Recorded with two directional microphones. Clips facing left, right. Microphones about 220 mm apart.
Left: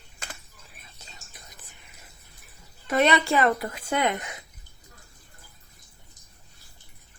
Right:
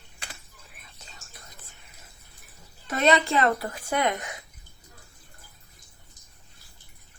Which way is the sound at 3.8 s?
25° left (ahead or behind).